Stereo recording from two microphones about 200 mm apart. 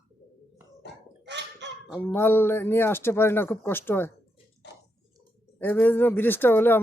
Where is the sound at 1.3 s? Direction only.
60° right (ahead or behind).